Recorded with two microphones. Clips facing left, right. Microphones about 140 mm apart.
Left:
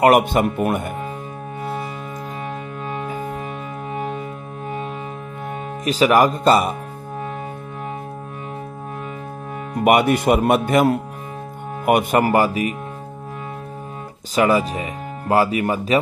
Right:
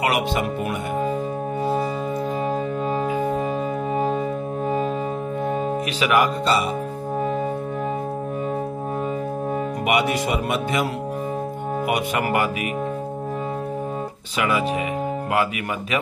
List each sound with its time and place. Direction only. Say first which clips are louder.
0.0 s speech: left 7 dB; 50° left (ahead or behind)
2.9 s music: right 3 dB; 45° right (ahead or behind)
3.9 s music: right 4 dB; 35° right (ahead or behind)
5.9 s speech: left 7 dB; 40° left (ahead or behind)
9.8 s speech: left 8 dB; 50° left (ahead or behind)
14.3 s speech: left 5 dB; 40° left (ahead or behind)